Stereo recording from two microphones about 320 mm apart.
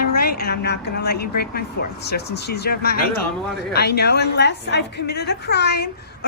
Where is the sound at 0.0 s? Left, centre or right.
Left.